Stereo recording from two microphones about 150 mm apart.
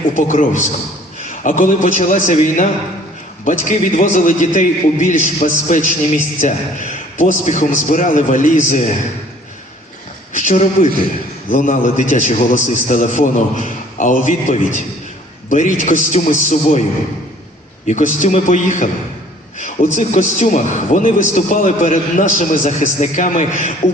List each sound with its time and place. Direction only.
0.1 s a man's voice: 60° left (ahead or behind)
10.3 s a man's voice: 55° left (ahead or behind)
17.8 s a man's voice: 55° left (ahead or behind)